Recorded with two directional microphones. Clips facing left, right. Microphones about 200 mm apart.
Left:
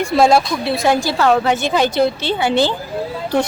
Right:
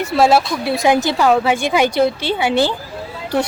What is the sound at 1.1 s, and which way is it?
Speech, 10° right (ahead or behind).